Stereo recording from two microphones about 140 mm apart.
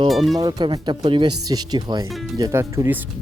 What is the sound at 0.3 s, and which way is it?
Speech, 30° right (ahead or behind).